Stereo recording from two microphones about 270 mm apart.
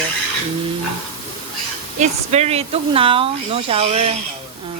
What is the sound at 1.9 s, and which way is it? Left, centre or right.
A woman's voice, right.